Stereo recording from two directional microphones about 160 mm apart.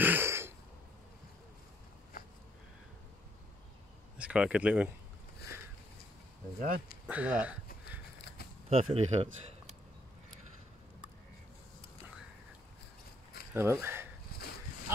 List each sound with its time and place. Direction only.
0.0 s a sound: 15° right (ahead or behind)
4.2 s speech: 5° right (ahead or behind)
7.1 s speech: 10° right (ahead or behind)
8.6 s speech: 40° right (ahead or behind)
13.5 s speech: 15° right (ahead or behind)
14.3 s dog: 70° left (ahead or behind)